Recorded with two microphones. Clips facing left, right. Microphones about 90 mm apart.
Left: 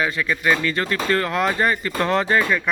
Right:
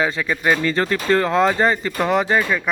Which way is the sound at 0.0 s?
25° right (ahead or behind).